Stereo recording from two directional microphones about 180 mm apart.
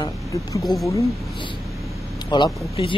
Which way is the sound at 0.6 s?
Centre (ahead or behind).